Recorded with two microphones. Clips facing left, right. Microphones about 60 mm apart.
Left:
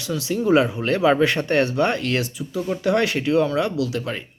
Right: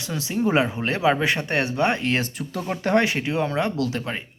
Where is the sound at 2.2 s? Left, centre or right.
Right.